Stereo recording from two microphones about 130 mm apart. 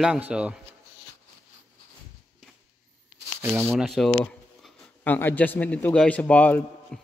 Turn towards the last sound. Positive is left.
turn(degrees=5)  # may be behind; listen again after turning